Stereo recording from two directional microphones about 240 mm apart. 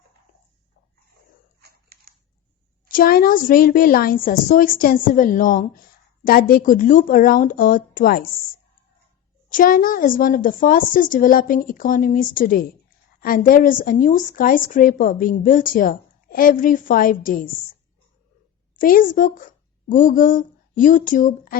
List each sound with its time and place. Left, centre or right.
1.6 s a sound: right
2.9 s a woman's voice: left
9.5 s a woman's voice: left
18.8 s a woman's voice: left